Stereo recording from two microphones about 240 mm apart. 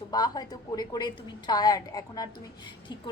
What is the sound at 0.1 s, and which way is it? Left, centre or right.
A woman's voice, centre.